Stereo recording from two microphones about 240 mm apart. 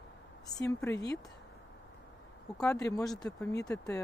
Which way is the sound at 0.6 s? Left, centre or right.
Centre.